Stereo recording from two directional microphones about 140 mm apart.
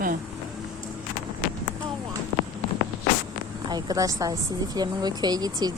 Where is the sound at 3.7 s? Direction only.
30° right (ahead or behind).